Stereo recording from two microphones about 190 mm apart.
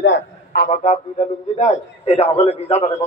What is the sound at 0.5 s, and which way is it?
A man's voice, 45° left (ahead or behind).